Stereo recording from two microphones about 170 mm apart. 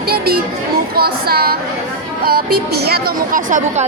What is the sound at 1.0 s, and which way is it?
A woman's voice, 65° right (ahead or behind).